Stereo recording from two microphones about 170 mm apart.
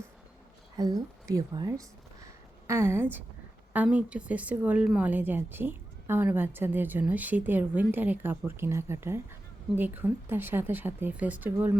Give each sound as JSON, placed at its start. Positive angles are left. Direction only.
{"t": 0.8, "sound": "a woman's voice", "side_deg": -20}